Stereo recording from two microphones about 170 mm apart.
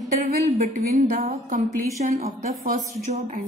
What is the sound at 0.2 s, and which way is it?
A woman's voice, 60° right (ahead or behind).